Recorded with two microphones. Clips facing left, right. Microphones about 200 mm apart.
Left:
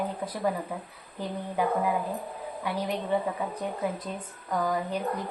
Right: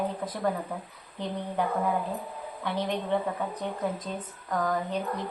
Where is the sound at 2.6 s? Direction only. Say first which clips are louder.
Right 1 dB; 10° left (ahead or behind).